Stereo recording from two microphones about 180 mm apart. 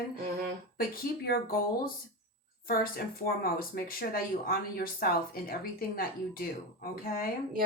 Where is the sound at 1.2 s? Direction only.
55° left (ahead or behind).